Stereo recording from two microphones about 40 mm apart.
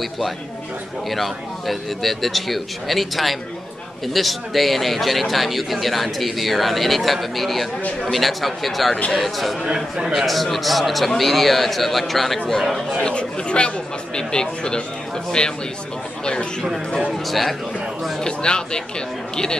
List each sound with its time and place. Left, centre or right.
1.1 s a man's voice: centre
13.0 s speech: left
17.3 s a man's voice: centre
18.2 s speech: left